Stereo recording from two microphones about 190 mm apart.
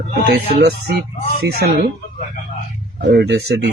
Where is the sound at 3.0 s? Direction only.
65° right (ahead or behind).